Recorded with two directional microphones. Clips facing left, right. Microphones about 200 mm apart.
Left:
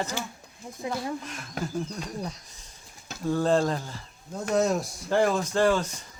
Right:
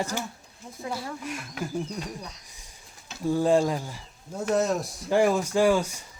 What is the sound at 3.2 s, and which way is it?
Speech, 10° right (ahead or behind).